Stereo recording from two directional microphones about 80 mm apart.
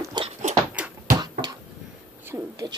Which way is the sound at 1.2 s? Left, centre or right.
Right.